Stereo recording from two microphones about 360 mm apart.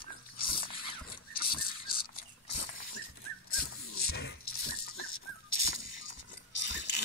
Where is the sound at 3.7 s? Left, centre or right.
Left.